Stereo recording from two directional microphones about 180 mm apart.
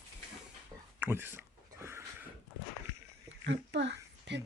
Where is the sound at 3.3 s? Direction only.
85° right.